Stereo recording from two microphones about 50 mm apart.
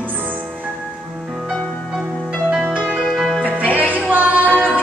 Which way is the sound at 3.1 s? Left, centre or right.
Centre.